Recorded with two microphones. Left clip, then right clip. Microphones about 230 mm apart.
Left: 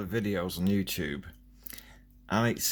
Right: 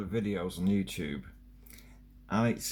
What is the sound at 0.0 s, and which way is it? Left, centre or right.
Speech, left.